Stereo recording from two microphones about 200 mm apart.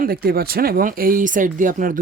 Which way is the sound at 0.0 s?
50° right (ahead or behind).